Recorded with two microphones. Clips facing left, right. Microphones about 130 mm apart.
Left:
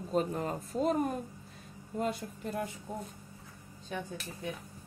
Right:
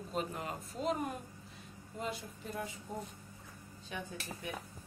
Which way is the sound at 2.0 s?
50° left (ahead or behind).